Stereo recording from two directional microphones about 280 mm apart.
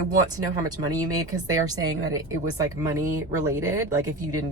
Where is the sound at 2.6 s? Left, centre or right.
Centre.